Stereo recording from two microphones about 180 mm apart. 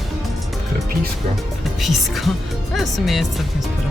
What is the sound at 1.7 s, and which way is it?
Speech, centre (ahead or behind).